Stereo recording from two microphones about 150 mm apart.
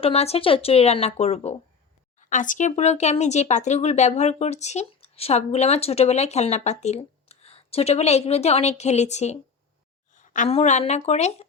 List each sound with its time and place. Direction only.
0.0 s a woman's voice: 45° left (ahead or behind)
2.3 s speech: 60° left (ahead or behind)
10.2 s a sound: 55° left (ahead or behind)
10.5 s speech: 50° left (ahead or behind)